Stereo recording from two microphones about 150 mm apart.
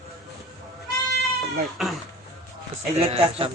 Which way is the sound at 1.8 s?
5° right (ahead or behind).